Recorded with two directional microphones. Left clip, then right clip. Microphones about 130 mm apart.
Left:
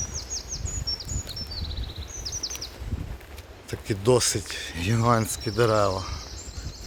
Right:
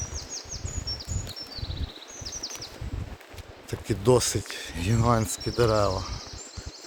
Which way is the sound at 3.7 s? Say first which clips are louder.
Even; 20° right (ahead or behind).